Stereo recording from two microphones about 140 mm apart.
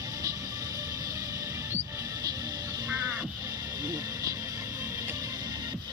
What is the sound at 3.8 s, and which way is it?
Music, 25° right (ahead or behind).